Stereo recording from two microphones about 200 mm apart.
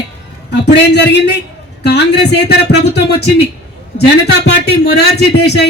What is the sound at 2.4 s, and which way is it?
A man's voice, 55° left (ahead or behind).